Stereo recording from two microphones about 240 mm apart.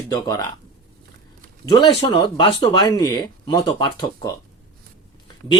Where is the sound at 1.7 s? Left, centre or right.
Centre.